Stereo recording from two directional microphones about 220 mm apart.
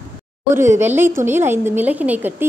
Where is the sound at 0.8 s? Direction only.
10° right (ahead or behind).